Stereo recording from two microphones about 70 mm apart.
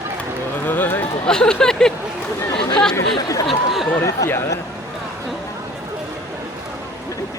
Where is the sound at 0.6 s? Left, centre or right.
Left.